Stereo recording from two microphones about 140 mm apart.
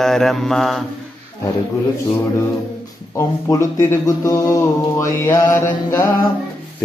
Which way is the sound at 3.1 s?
20° left (ahead or behind).